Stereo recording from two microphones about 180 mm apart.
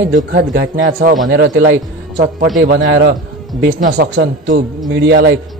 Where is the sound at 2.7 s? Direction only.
70° right (ahead or behind).